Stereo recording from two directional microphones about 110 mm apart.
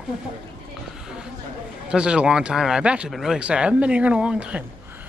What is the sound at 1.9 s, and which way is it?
Speech, 10° right (ahead or behind).